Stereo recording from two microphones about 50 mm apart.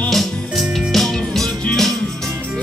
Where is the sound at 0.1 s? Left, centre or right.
Centre.